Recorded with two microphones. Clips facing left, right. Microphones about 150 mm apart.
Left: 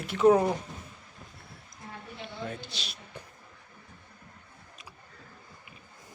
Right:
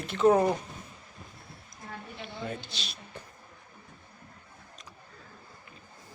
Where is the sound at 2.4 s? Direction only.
10° left (ahead or behind).